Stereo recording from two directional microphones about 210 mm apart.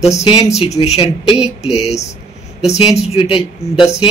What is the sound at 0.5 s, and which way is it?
Speech, 30° left (ahead or behind).